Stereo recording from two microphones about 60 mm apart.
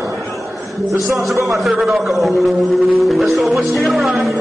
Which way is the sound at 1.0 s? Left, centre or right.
Centre.